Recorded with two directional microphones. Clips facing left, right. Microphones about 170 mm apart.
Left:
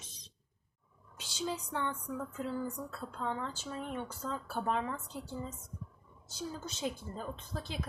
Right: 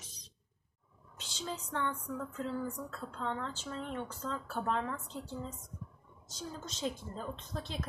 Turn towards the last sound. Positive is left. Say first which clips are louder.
# even
turn(degrees=5)  # may be behind; listen again after turning